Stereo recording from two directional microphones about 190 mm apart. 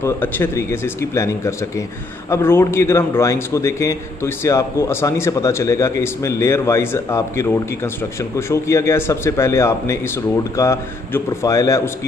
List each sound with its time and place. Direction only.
0.0 s a man's voice: 15° left (ahead or behind)